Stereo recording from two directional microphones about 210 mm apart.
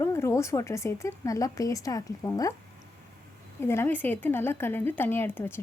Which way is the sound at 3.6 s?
10° left (ahead or behind).